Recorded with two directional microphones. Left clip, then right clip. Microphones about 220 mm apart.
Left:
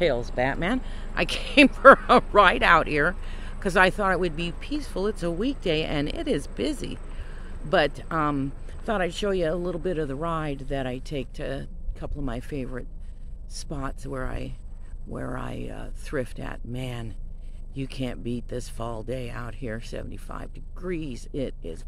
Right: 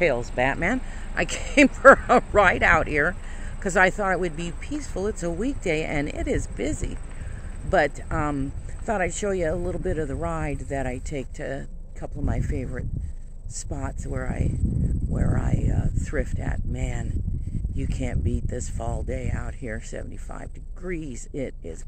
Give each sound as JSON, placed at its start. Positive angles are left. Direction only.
{"t": 0.0, "sound": "speech", "side_deg": -10}